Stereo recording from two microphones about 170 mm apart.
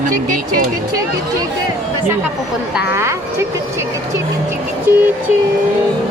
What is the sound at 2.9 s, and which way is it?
Speech, 15° right (ahead or behind).